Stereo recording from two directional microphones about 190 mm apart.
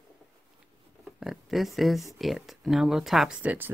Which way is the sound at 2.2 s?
Centre (ahead or behind).